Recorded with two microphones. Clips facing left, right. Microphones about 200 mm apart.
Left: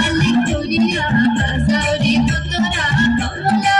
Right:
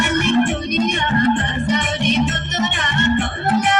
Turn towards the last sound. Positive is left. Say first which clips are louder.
# left 2 dB
turn(degrees=40)  # may be behind; listen again after turning